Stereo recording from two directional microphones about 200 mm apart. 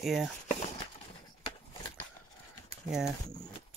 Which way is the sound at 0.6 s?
30° left (ahead or behind).